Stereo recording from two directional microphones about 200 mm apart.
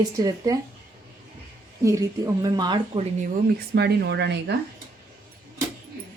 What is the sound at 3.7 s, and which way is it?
Speech, 55° right (ahead or behind).